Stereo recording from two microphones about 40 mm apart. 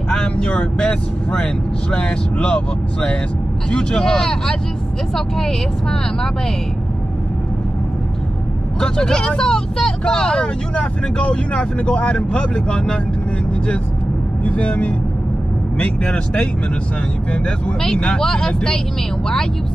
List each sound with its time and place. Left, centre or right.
0.1 s speech: centre
8.7 s speech: centre
10.7 s speech: left
14.4 s speech: left
17.8 s speech: centre